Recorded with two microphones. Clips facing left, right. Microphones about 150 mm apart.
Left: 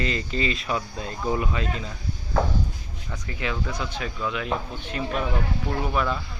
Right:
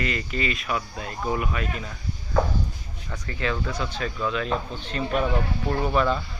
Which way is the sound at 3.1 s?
15° left (ahead or behind).